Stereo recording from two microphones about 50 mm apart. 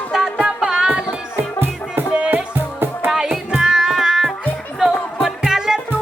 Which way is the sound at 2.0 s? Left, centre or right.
Right.